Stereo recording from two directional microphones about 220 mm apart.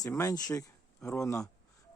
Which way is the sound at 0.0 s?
15° left (ahead or behind).